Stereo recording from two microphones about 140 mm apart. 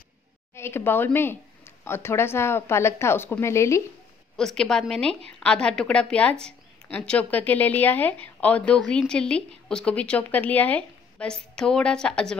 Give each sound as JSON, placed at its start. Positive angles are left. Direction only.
{"t": 0.6, "sound": "speech", "side_deg": 15}
{"t": 4.4, "sound": "a woman's voice", "side_deg": 5}